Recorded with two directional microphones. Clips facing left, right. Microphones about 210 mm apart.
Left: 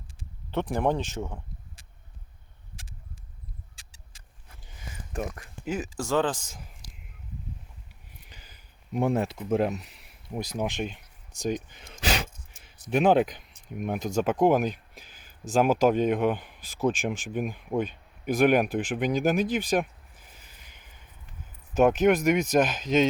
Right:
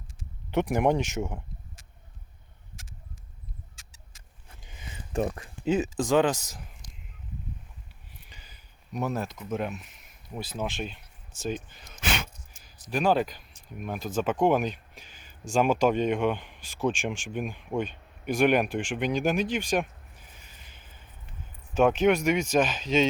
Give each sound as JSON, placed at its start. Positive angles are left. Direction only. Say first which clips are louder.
{"t": 0.5, "sound": "speech", "louder": "right 2 dB", "side_deg": -10}
{"t": 3.8, "sound": "vehicle", "louder": "right 1 dB", "side_deg": 30}
{"t": 4.4, "sound": "a sound", "louder": "even", "side_deg": -20}
{"t": 6.0, "sound": "speech", "louder": "right 1 dB", "side_deg": -15}
{"t": 8.3, "sound": "a sound", "louder": "left 1 dB", "side_deg": 10}
{"t": 8.9, "sound": "speech", "louder": "left 5 dB", "side_deg": 25}
{"t": 10.3, "sound": "speech", "louder": "left 3 dB", "side_deg": 15}
{"t": 11.9, "sound": "gasp", "louder": "left 3 dB", "side_deg": 35}
{"t": 12.9, "sound": "speech", "louder": "left 4 dB", "side_deg": 20}
{"t": 20.7, "sound": "a sound", "louder": "right 1 dB", "side_deg": 15}
{"t": 21.8, "sound": "speech", "louder": "left 1 dB", "side_deg": 5}